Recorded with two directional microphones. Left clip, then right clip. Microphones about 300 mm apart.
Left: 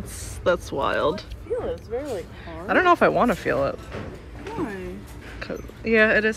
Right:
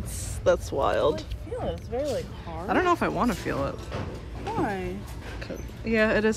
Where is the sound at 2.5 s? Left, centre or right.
Centre.